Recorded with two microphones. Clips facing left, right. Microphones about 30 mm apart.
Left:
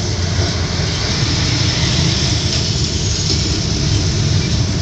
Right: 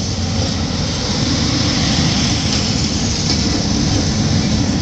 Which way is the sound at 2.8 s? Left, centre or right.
Left.